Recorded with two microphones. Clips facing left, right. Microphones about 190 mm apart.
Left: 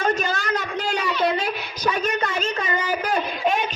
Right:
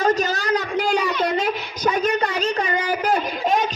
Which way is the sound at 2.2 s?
35° right (ahead or behind).